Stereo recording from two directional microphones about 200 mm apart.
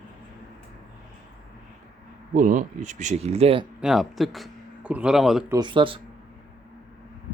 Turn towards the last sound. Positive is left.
turn(degrees=-25)  # may be behind; listen again after turning